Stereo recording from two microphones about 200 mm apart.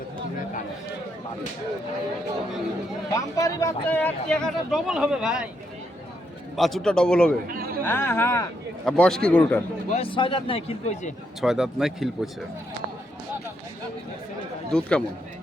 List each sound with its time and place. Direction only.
3.2 s speech: 15° left (ahead or behind); by 5.5 s 5° right (ahead or behind)
6.6 s speech: centre (ahead or behind)
7.4 s a sound: 45° right (ahead or behind)
7.9 s speech: 10° left (ahead or behind)
8.8 s speech: centre (ahead or behind)
9.9 s speech: 25° left (ahead or behind)
11.3 s speech: centre (ahead or behind)
14.7 s speech: 5° left (ahead or behind)